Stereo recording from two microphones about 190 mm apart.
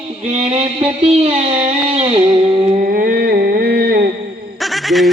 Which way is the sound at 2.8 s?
50° right (ahead or behind).